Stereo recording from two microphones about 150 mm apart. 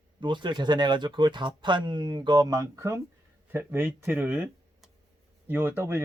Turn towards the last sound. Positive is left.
turn(degrees=-15)  # may be behind; listen again after turning